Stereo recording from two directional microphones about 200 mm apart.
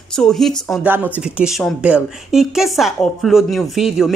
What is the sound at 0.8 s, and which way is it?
A woman's voice, 10° right (ahead or behind).